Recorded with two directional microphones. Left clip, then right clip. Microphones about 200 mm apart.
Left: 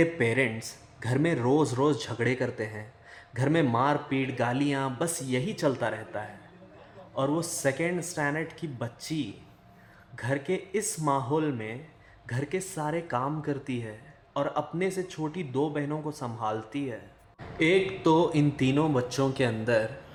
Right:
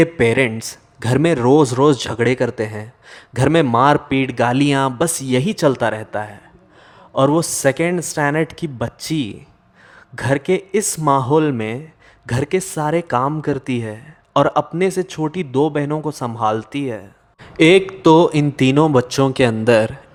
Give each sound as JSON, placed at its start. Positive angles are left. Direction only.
{"t": 0.0, "sound": "speech", "side_deg": -35}